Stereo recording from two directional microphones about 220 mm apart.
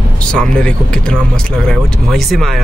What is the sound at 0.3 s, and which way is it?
Speech, 5° left (ahead or behind).